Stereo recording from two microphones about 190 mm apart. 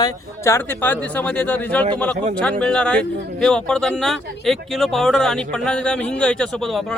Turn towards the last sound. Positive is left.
turn(degrees=0)  # may be behind; listen again after turning